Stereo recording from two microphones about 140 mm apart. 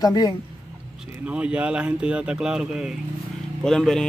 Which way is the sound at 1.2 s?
10° right (ahead or behind).